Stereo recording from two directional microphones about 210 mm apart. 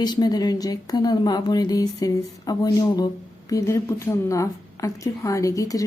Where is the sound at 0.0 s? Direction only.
20° left (ahead or behind).